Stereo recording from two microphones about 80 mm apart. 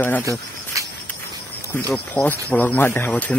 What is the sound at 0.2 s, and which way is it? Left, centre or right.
Speech, right.